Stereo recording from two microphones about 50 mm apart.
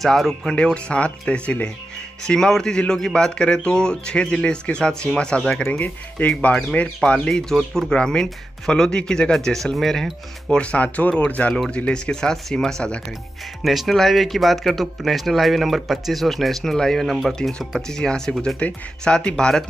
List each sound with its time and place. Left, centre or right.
0.0 s speech: centre
0.5 s speech: centre
2.2 s speech: centre
5.4 s speech: centre
5.8 s speech: left
7.2 s speech: centre
10.6 s speech: left
13.7 s speech: centre
17.4 s speech: centre